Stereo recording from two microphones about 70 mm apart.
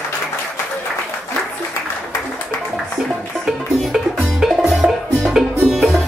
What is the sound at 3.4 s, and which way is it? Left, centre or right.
Music, centre.